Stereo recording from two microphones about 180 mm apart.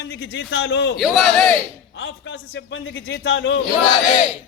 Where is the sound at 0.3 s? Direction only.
85° left.